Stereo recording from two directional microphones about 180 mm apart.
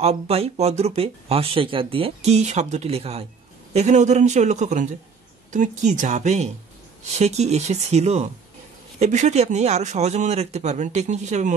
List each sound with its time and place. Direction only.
0.0 s speech: 35° right (ahead or behind)